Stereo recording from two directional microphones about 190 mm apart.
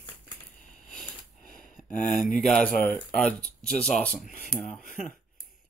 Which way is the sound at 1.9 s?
45° left (ahead or behind).